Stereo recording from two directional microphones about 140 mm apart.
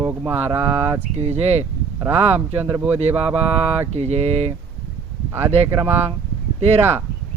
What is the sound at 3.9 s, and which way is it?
Speech, 50° right (ahead or behind).